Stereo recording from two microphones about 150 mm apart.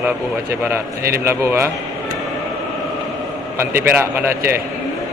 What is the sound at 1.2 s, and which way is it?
Speech, 15° right (ahead or behind).